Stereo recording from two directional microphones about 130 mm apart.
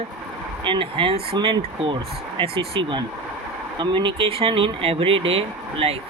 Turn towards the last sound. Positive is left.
turn(degrees=-50)  # may be behind; listen again after turning